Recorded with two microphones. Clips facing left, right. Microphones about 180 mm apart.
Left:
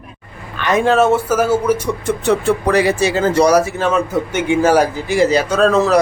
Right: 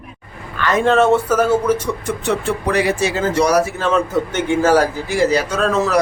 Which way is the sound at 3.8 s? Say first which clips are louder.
Left 1 dB; 10° left (ahead or behind).